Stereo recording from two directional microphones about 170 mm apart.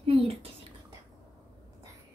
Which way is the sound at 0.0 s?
35° right (ahead or behind).